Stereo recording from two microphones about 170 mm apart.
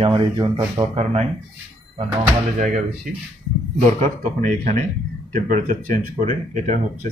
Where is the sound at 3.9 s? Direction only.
45° right (ahead or behind).